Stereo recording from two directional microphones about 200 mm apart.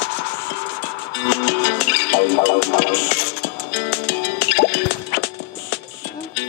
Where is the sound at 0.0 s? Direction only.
65° left (ahead or behind).